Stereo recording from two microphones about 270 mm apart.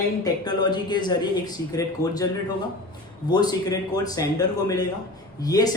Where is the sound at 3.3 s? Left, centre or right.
Centre.